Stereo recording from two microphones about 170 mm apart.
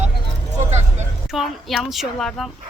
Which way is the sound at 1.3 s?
Centre (ahead or behind).